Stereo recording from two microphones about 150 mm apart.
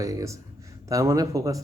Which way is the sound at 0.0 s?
20° right (ahead or behind).